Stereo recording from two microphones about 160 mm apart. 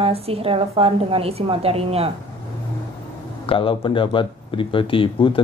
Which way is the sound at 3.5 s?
35° left (ahead or behind).